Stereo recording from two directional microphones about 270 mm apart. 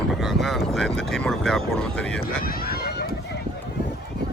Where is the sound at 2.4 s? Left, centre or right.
Left.